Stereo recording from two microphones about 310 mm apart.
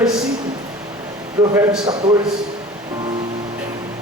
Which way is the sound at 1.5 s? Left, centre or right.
Centre.